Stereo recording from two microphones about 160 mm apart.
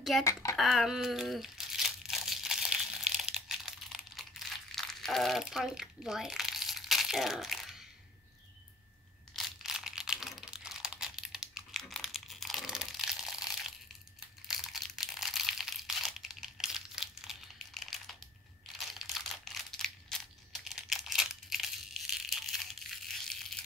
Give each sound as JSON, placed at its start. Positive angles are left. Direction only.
{"t": 0.2, "sound": "speech", "side_deg": 20}
{"t": 0.6, "sound": "crumpling", "side_deg": 0}
{"t": 9.3, "sound": "computer keyboard", "side_deg": 0}
{"t": 14.5, "sound": "crumpling", "side_deg": 0}